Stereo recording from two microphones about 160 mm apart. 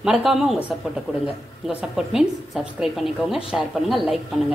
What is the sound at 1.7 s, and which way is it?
A woman's voice, 5° right (ahead or behind).